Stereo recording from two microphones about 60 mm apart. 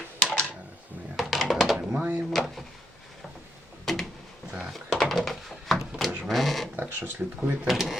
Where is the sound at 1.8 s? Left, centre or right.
Right.